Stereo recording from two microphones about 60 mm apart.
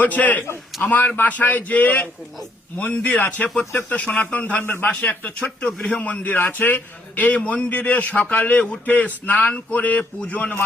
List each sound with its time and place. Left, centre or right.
0.0 s a man's voice: left
4.6 s a man's voice: left
4.9 s a man's voice: left
6.3 s a man's voice: left
10.0 s a man's voice: centre
10.3 s a man's voice: left